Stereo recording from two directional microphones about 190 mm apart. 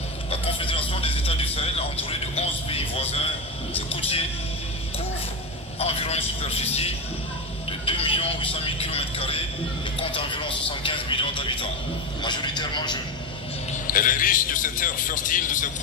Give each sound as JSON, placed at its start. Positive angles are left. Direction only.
{"t": 0.3, "sound": "a sound", "side_deg": 25}
{"t": 5.8, "sound": "a man's voice", "side_deg": 30}
{"t": 13.8, "sound": "a man's voice", "side_deg": 45}